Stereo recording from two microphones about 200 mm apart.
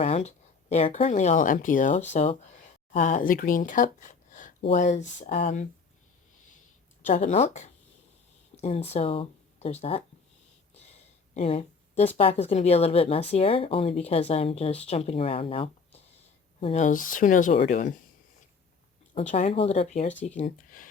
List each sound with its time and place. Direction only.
0.0 s speech: 35° left (ahead or behind)
7.1 s speech: 35° left (ahead or behind)
11.3 s speech: 30° left (ahead or behind)
19.3 s speech: 35° left (ahead or behind)